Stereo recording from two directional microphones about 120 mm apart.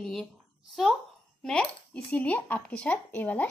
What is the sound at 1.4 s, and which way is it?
A woman's voice, 10° left (ahead or behind).